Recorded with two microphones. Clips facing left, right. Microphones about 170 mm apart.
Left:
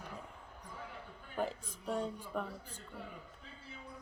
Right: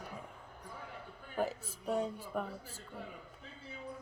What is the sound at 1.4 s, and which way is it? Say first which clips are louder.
A man's voice: right 2 dB; 5° right (ahead or behind).